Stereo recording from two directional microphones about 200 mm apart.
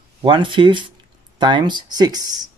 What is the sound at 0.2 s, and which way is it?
Speech, 25° right (ahead or behind).